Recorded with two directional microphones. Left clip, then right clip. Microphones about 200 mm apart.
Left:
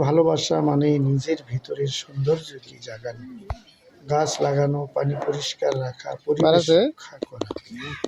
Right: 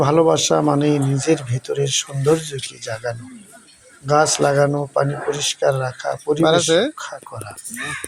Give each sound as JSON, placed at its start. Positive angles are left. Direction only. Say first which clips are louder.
{"t": 0.0, "sound": "speech", "louder": "right 4 dB", "side_deg": -15}